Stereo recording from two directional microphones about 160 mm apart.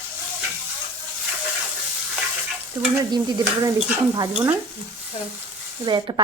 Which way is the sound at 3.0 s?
20° right (ahead or behind).